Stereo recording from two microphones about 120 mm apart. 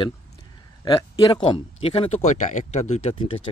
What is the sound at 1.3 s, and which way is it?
Speech, 40° left (ahead or behind).